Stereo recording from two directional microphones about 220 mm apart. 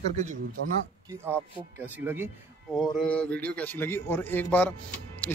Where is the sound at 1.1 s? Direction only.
10° right (ahead or behind).